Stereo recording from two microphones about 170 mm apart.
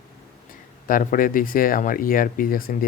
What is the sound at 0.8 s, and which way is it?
Speech, 55° left (ahead or behind).